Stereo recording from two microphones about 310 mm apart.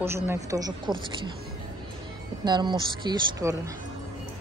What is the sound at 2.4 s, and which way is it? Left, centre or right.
Speech, centre.